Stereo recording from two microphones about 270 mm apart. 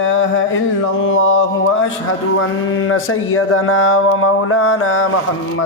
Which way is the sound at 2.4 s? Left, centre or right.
Left.